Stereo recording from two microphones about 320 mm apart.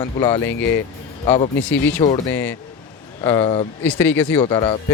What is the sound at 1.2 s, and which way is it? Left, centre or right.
Speech, centre.